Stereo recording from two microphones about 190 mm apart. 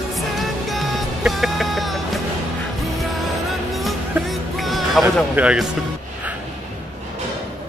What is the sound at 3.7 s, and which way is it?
Music, centre (ahead or behind).